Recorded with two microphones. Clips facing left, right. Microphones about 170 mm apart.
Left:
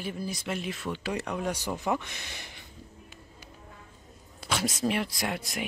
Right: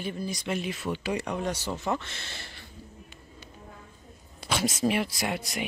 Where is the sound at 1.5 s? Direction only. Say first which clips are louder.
Left 3 dB; 15° left (ahead or behind).